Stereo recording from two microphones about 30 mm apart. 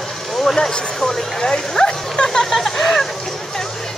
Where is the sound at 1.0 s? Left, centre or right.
Centre.